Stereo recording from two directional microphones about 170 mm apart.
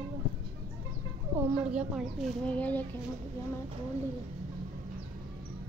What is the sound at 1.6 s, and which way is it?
Speech, 5° right (ahead or behind).